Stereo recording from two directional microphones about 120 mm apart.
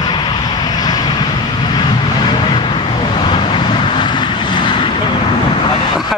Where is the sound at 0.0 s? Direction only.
35° left (ahead or behind).